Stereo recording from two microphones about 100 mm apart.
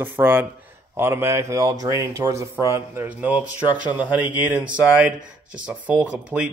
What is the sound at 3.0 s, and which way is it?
Speech, 15° right (ahead or behind).